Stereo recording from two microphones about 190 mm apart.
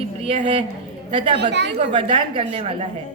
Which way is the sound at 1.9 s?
25° right (ahead or behind).